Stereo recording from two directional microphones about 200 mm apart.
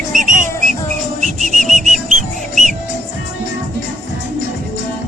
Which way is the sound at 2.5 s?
40° right (ahead or behind).